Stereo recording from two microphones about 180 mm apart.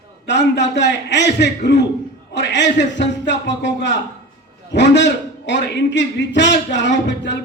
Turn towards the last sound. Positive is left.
turn(degrees=80)